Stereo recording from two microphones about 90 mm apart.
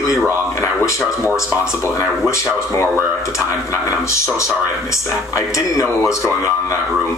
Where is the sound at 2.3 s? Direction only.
30° left (ahead or behind).